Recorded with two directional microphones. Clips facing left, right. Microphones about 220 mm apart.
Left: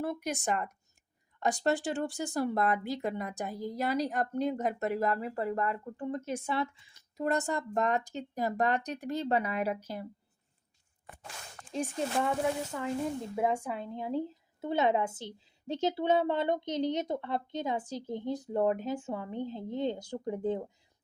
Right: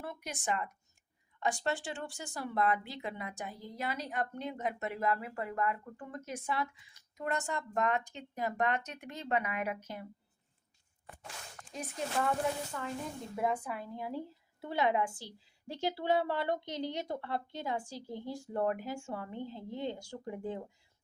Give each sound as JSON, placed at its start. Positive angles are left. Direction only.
{"t": 0.0, "sound": "speech", "side_deg": 40}
{"t": 11.7, "sound": "a woman's voice", "side_deg": 30}
{"t": 13.3, "sound": "a woman's voice", "side_deg": 25}